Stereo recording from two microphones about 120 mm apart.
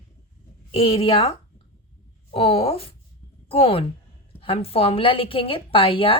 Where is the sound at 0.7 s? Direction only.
50° left (ahead or behind).